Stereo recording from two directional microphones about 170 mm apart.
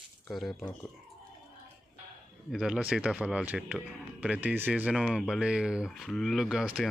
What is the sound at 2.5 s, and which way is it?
Speech, 5° right (ahead or behind).